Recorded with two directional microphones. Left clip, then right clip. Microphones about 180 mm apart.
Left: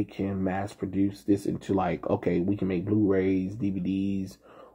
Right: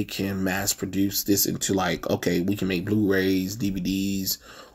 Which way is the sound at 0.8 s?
20° right (ahead or behind).